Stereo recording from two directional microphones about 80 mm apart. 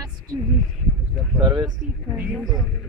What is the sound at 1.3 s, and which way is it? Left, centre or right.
Speech, right.